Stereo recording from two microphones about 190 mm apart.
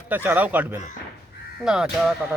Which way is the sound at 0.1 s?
10° right (ahead or behind).